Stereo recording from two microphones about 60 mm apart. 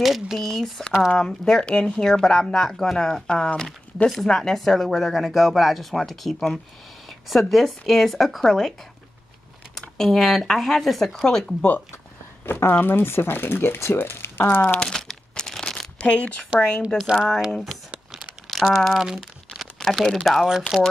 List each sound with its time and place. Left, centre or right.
0.0 s speech: centre
4.1 s speech: centre
9.8 s speech: centre
12.4 s speech: left
14.9 s crumpling: centre
16.0 s speech: centre
17.1 s speech: centre
17.9 s a sound: centre
18.7 s speech: centre
18.9 s crumpling: centre